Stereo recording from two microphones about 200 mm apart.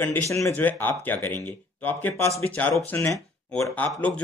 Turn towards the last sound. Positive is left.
turn(degrees=5)  # may be behind; listen again after turning